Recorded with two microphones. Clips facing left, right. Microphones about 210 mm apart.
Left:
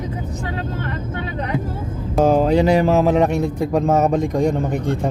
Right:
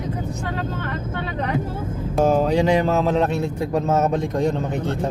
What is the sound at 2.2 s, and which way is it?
Speech, 5° left (ahead or behind).